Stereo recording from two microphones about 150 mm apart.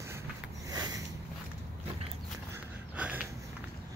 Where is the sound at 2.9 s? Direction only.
10° right (ahead or behind).